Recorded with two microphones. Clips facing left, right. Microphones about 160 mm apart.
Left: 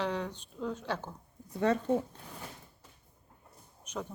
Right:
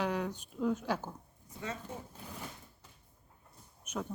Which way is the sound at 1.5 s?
65° left (ahead or behind).